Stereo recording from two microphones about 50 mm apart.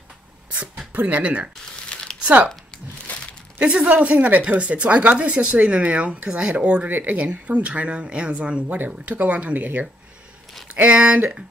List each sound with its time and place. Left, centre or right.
0.6 s speech: right
3.1 s a sound: left
3.5 s speech: right
6.9 s speech: right
7.2 s speech: right
8.6 s speech: right